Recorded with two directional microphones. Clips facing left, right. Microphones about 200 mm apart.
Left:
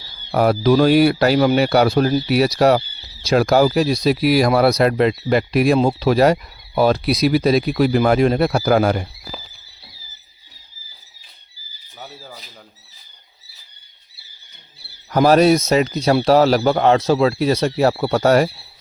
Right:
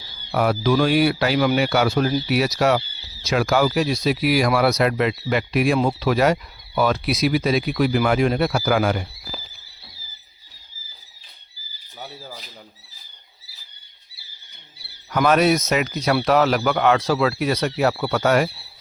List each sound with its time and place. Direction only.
0.3 s speech: 40° left (ahead or behind)
11.9 s speech: centre (ahead or behind)
15.1 s speech: 35° left (ahead or behind)